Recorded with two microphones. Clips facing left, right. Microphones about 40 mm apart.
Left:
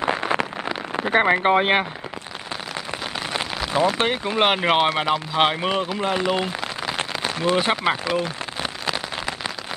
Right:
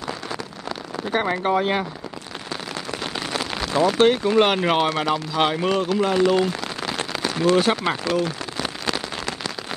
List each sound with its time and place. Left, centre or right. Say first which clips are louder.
0.0 s a sound: left 8 dB; left
0.9 s speech: left 5 dB; left
3.6 s speech: right 4 dB; centre
8.6 s rain on surface: even; centre